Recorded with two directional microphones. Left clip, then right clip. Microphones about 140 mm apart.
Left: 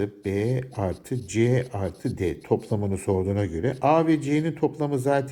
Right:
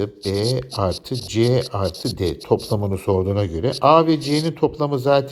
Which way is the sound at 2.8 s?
25° right (ahead or behind).